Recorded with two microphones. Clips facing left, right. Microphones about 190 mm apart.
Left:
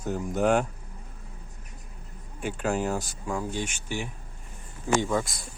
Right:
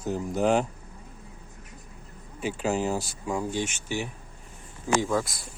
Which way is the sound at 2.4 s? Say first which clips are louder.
Right 1 dB; centre (ahead or behind).